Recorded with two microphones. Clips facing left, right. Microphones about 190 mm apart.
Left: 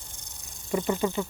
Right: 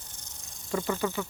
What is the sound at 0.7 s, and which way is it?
Snake, 20° left (ahead or behind).